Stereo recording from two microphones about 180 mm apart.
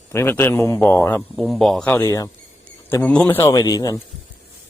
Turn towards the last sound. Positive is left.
turn(degrees=20)  # may be behind; listen again after turning